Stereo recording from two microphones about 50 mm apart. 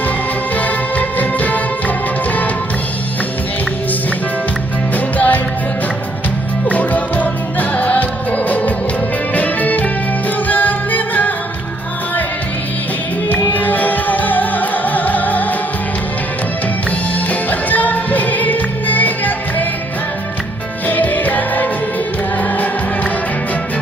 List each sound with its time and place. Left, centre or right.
0.5 s music: left
4.9 s music: left
6.7 s music: left
13.2 s music: left
17.5 s music: left
20.8 s music: left